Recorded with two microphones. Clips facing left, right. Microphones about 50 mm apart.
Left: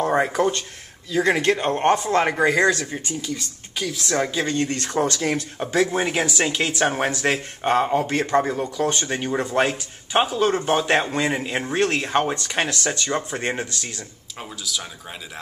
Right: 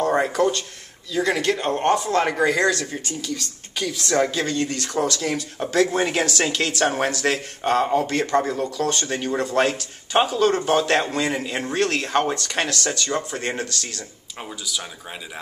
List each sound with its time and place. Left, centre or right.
0.0 s a sound: centre
1.1 s speech: left
5.0 s speech: left
5.3 s speech: centre
14.4 s speech: centre